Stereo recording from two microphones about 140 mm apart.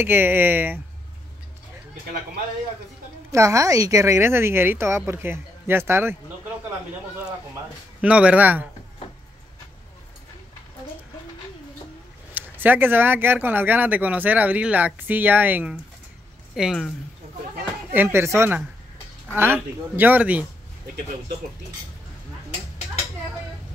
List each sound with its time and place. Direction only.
0.0 s speech: 15° right (ahead or behind)
3.3 s speech: 20° right (ahead or behind)
8.0 s speech: 10° right (ahead or behind)
12.4 s speech: 15° right (ahead or behind)
16.5 s speech: centre (ahead or behind)
17.9 s speech: 15° right (ahead or behind)